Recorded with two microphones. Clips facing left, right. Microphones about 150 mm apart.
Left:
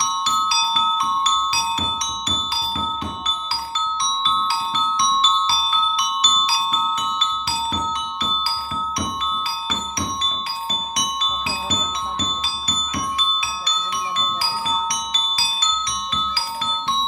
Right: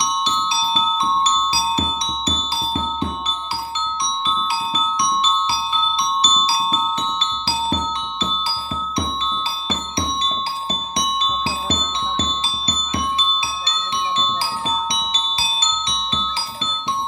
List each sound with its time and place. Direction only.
0.0 s marimba: 20° right (ahead or behind)
5.5 s marimba: 30° right (ahead or behind)
11.0 s music: 30° right (ahead or behind)
12.2 s marimba: 25° right (ahead or behind)
14.4 s glockenspiel: 25° right (ahead or behind)